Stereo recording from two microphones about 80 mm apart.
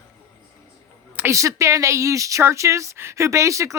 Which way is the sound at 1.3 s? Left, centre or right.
Right.